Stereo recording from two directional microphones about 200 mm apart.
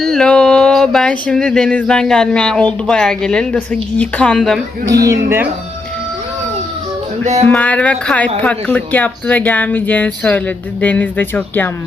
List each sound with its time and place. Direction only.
0.0 s a sound: 5° left (ahead or behind)
2.8 s a woman's voice: 5° left (ahead or behind)
4.9 s speech: 15° right (ahead or behind)
7.4 s speech: 5° left (ahead or behind)